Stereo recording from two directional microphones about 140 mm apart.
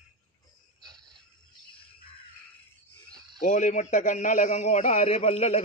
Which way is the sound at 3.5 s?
60° left (ahead or behind).